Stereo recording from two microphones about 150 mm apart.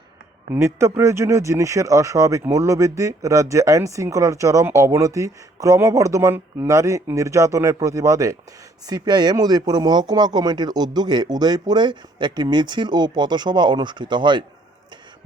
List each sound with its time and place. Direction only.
0.5 s speech: 20° right (ahead or behind)